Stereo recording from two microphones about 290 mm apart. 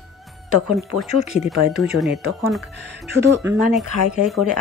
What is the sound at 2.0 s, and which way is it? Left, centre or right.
Speech, centre.